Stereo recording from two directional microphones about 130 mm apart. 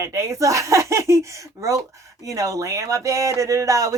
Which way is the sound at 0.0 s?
25° right (ahead or behind).